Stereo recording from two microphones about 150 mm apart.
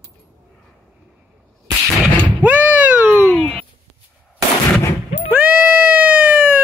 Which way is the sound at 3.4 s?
10° left (ahead or behind).